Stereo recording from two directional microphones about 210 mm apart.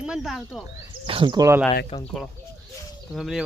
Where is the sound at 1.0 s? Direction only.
25° right (ahead or behind).